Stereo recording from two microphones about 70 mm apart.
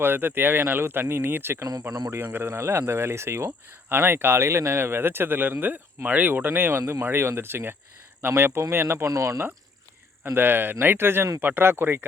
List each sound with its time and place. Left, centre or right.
0.0 s speech: right
10.3 s speech: right